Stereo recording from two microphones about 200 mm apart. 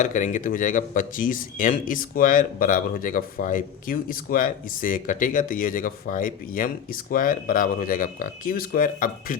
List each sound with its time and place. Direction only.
0.0 s speech: 40° left (ahead or behind)